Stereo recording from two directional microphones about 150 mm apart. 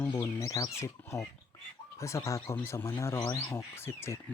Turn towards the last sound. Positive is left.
turn(degrees=15)  # may be behind; listen again after turning